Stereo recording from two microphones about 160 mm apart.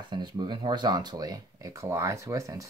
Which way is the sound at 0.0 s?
30° right (ahead or behind).